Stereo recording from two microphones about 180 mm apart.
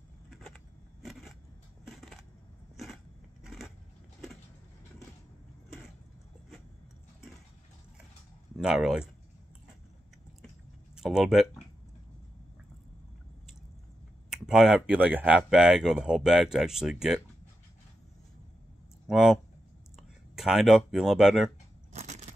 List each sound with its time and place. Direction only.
1.9 s a sound: centre (ahead or behind)
3.4 s vehicle: centre (ahead or behind)
8.5 s speech: centre (ahead or behind)
11.0 s speech: 5° right (ahead or behind)
14.3 s speech: 5° right (ahead or behind)
19.0 s speech: centre (ahead or behind)
21.9 s a sound: 40° right (ahead or behind)